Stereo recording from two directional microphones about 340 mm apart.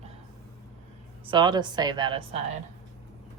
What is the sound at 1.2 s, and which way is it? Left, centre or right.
A woman's voice, centre.